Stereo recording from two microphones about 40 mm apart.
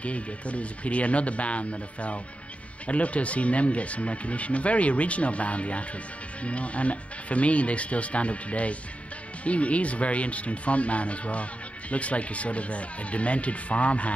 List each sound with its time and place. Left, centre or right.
0.0 s speech: left